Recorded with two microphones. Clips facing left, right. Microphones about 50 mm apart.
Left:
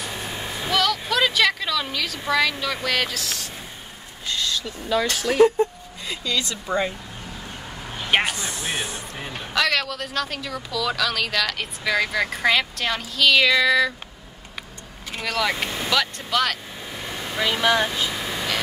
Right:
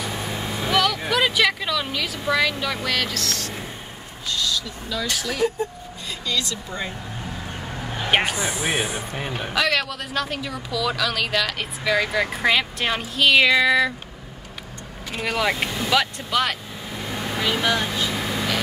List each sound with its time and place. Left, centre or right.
0.2 s vehicle: right
0.7 s a sound: centre
3.0 s speech: centre
4.3 s speech: left
8.3 s speech: centre
15.1 s speech: centre
17.1 s vehicle: right
17.5 s speech: left
18.2 s vehicle: centre